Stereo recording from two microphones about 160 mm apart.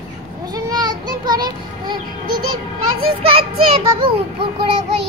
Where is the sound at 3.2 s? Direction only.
35° right (ahead or behind).